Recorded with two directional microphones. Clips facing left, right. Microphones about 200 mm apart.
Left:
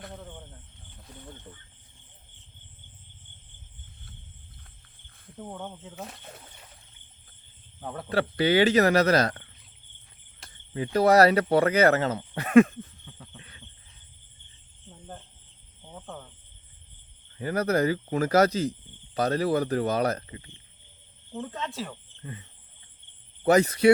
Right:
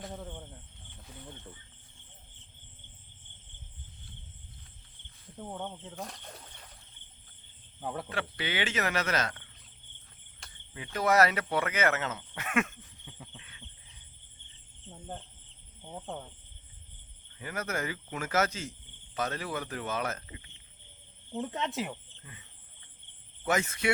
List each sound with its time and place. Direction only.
5.4 s speech: centre (ahead or behind)
7.8 s speech: 5° right (ahead or behind)
8.1 s speech: 40° left (ahead or behind)
10.9 s speech: 35° left (ahead or behind)
13.1 s cricket: 15° right (ahead or behind)
17.3 s speech: 35° left (ahead or behind)
21.3 s speech: 20° right (ahead or behind)
23.4 s speech: 35° left (ahead or behind)